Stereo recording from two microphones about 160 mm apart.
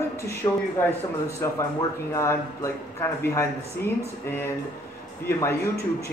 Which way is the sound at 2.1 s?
15° left (ahead or behind).